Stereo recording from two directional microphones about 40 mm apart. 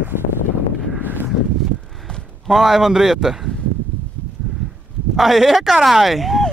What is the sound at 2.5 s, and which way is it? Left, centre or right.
A man's voice, centre.